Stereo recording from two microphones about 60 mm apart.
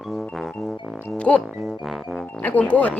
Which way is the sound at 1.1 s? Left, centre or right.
Centre.